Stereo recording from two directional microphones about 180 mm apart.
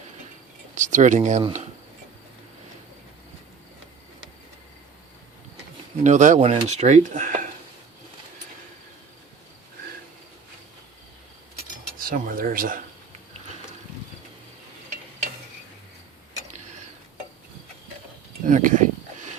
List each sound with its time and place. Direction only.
0.8 s speech: 45° right (ahead or behind)
6.0 s speech: 45° right (ahead or behind)
11.9 s speech: 50° right (ahead or behind)
18.4 s a sound: 45° right (ahead or behind)